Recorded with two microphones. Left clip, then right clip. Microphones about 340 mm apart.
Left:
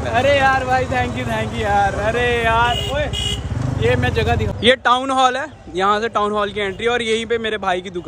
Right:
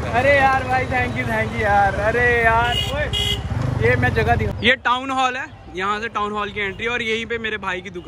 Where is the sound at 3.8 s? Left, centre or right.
Centre.